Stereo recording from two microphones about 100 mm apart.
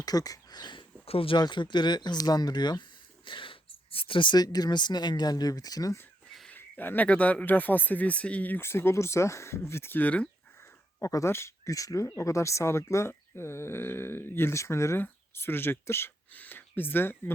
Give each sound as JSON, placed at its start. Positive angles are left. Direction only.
{"t": 0.0, "sound": "speech", "side_deg": 40}
{"t": 1.0, "sound": "speech", "side_deg": 70}
{"t": 1.4, "sound": "speech", "side_deg": 50}
{"t": 3.2, "sound": "a sound", "side_deg": 55}
{"t": 4.4, "sound": "speech", "side_deg": 40}
{"t": 6.5, "sound": "speech", "side_deg": 20}
{"t": 11.0, "sound": "speech", "side_deg": 30}